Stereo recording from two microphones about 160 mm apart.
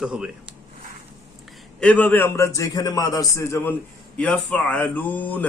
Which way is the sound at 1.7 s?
10° left (ahead or behind).